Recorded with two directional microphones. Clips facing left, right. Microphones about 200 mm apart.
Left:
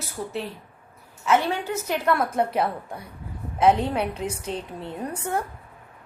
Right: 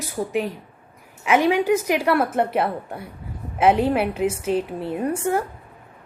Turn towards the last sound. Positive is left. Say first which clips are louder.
# right 6 dB
turn(degrees=-5)  # may be behind; listen again after turning